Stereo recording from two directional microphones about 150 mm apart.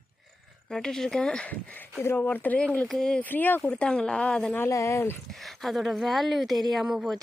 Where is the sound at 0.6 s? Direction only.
5° left (ahead or behind).